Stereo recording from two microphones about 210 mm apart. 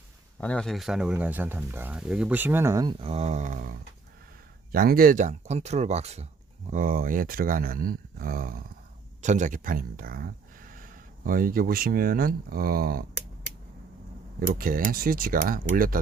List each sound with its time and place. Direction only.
0.3 s speech: 5° left (ahead or behind); by 13.1 s 45° right (ahead or behind)
14.3 s speech: 45° right (ahead or behind)